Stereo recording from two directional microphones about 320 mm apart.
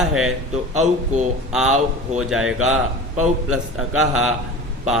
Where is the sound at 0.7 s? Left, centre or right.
Right.